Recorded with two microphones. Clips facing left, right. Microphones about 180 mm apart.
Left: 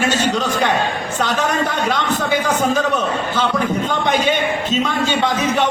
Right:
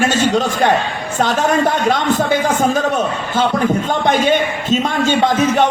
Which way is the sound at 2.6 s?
50° right (ahead or behind).